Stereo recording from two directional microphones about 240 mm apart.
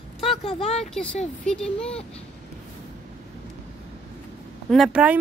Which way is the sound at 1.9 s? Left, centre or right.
Left.